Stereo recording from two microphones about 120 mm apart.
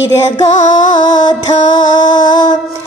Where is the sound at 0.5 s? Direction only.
90° left.